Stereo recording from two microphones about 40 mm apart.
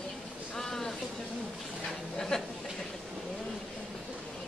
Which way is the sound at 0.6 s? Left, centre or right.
Centre.